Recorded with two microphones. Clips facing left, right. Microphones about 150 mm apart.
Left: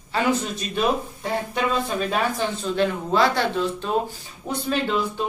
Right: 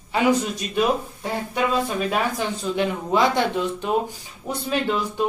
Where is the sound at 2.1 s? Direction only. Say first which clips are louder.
Even; 10° right (ahead or behind).